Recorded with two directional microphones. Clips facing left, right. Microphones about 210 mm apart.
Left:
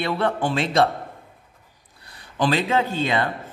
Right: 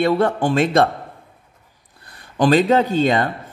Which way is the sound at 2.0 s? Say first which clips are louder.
Right 5 dB; 50° right (ahead or behind).